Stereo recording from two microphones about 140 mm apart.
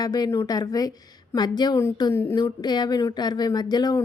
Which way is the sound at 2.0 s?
20° left (ahead or behind).